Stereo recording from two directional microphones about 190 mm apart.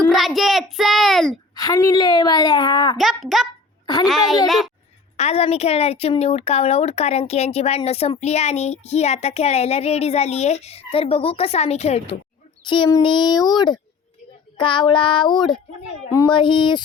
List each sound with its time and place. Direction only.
0.1 s a child's voice: centre (ahead or behind)
1.5 s a woman's voice: 20° left (ahead or behind)
3.0 s a child's voice: centre (ahead or behind)
5.1 s a woman's voice: 35° left (ahead or behind)